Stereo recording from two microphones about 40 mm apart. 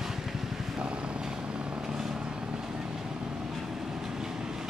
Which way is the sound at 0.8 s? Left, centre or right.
Right.